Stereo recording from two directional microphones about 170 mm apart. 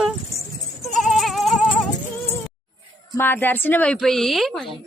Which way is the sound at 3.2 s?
10° left (ahead or behind).